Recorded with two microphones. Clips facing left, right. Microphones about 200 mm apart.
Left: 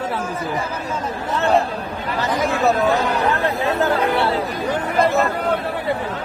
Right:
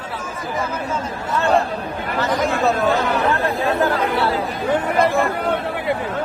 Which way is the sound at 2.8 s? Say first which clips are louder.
Even; 15° left (ahead or behind).